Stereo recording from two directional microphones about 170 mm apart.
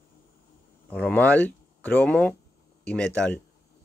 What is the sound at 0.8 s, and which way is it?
Speech, 10° left (ahead or behind).